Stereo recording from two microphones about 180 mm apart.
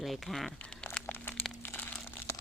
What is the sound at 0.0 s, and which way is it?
Crumpling, centre (ahead or behind).